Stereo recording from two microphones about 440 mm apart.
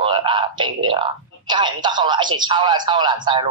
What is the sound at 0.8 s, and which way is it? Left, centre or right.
Speech, centre.